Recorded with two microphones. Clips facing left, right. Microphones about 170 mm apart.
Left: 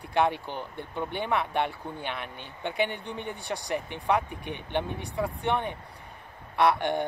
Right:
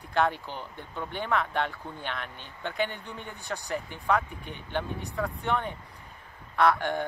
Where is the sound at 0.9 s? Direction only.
15° left (ahead or behind).